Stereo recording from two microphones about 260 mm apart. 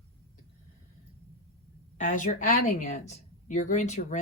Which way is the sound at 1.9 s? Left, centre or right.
Left.